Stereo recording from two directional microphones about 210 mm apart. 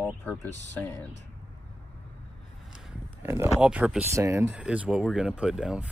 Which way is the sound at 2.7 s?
5° right (ahead or behind).